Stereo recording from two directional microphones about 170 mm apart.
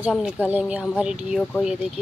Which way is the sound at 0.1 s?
5° right (ahead or behind).